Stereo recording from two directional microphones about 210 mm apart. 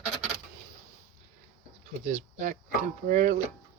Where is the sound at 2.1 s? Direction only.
35° right (ahead or behind).